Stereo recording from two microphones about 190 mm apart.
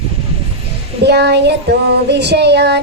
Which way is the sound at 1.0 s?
60° right (ahead or behind).